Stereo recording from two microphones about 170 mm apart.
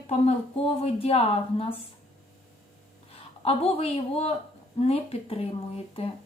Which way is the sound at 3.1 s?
35° left (ahead or behind).